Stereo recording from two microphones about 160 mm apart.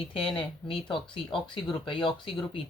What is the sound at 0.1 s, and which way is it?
Speech, 35° left (ahead or behind).